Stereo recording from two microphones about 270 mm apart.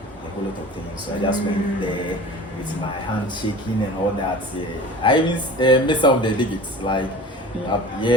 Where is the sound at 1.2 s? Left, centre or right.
Centre.